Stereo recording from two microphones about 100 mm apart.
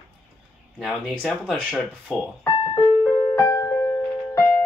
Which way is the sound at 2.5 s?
55° left (ahead or behind).